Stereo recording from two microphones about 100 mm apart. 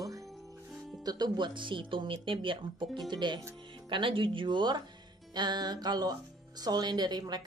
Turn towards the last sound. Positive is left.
turn(degrees=-45)  # may be behind; listen again after turning